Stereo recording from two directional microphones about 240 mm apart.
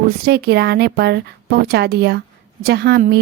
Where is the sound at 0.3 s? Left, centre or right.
Right.